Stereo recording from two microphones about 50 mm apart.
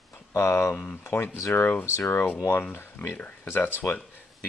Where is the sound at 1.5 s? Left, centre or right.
Left.